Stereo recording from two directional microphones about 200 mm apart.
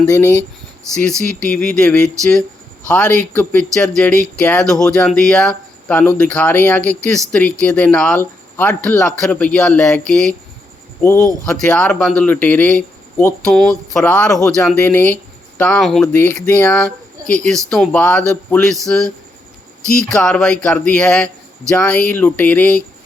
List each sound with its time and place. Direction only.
0.0 s speech: 15° left (ahead or behind)
11.0 s speech: 15° left (ahead or behind)